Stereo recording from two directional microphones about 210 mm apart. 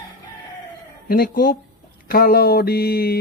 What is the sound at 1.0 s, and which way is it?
Speech, 45° left (ahead or behind).